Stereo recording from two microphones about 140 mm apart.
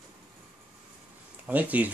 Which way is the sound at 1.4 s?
10° right (ahead or behind).